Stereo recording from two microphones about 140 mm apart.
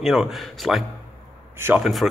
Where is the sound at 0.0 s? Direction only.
Centre (ahead or behind).